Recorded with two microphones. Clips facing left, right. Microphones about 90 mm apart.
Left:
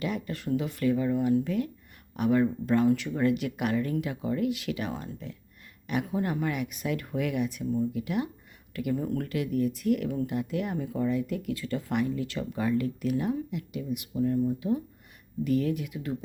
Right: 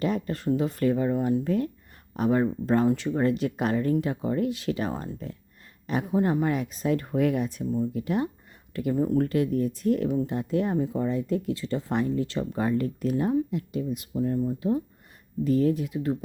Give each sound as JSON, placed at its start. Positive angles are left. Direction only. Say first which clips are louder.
{"t": 0.0, "sound": "speech", "louder": "right 5 dB", "side_deg": -35}
{"t": 10.1, "sound": "speech", "louder": "right 4 dB", "side_deg": -20}
{"t": 10.3, "sound": "speech", "louder": "right 5 dB", "side_deg": -35}